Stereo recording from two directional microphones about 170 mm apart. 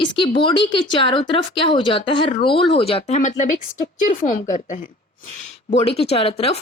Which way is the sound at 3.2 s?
45° left (ahead or behind).